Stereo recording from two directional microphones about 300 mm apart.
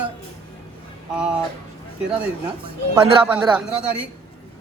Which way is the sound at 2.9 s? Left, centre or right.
Centre.